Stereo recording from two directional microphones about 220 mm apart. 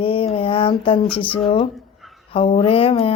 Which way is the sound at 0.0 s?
25° left (ahead or behind).